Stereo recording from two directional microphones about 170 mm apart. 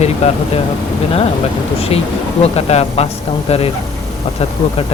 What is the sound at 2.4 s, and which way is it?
A man's voice, 40° left (ahead or behind).